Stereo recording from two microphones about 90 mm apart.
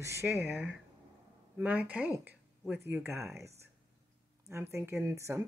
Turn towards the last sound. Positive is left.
turn(degrees=-30)  # may be behind; listen again after turning